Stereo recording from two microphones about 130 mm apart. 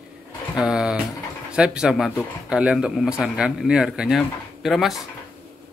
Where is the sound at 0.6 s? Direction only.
5° right (ahead or behind).